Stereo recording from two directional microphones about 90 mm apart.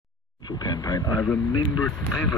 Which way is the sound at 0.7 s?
50° left (ahead or behind).